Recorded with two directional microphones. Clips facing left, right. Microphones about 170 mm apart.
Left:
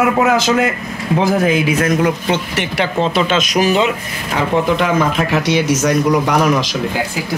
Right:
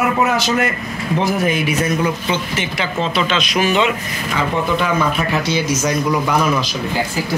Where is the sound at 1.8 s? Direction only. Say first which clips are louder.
Left 3 dB; 70° left (ahead or behind).